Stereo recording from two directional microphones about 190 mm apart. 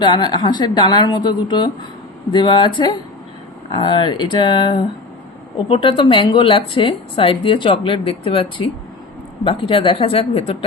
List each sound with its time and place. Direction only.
0.0 s a woman's voice: 25° left (ahead or behind)